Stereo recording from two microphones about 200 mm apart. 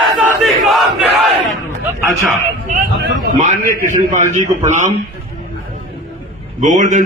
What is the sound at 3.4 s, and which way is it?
A man's voice, 40° right (ahead or behind).